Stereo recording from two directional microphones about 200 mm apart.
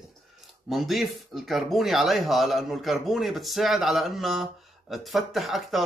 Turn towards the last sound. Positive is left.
turn(degrees=0)  # may be behind; listen again after turning